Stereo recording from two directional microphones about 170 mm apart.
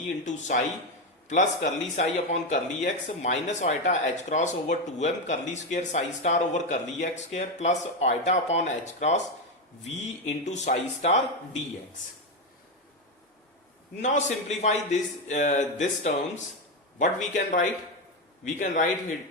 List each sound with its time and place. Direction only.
0.3 s speech: 45° left (ahead or behind)
14.0 s speech: 45° left (ahead or behind)